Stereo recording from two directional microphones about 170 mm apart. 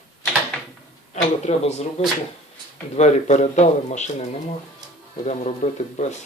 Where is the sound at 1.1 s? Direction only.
40° left (ahead or behind).